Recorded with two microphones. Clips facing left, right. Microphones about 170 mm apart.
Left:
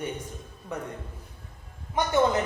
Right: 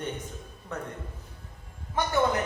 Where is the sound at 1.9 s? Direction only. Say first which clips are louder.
Left 2 dB; 20° left (ahead or behind).